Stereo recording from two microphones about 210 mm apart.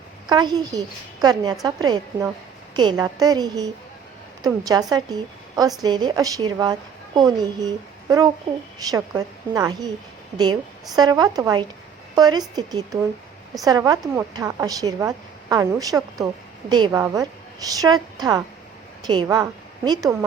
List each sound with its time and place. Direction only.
0.3 s a woman's voice: 20° right (ahead or behind)
8.9 s a woman's voice: 15° right (ahead or behind)